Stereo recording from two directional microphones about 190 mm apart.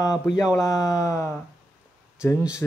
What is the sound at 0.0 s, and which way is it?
Speech, 20° left (ahead or behind).